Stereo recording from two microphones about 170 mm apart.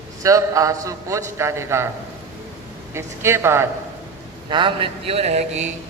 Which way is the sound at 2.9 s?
15° right (ahead or behind).